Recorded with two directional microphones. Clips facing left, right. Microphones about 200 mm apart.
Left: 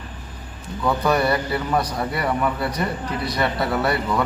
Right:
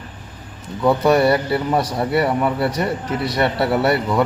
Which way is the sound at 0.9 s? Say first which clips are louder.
Right 5 dB; 25° right (ahead or behind).